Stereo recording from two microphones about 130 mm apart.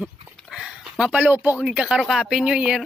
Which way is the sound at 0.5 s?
5° right (ahead or behind).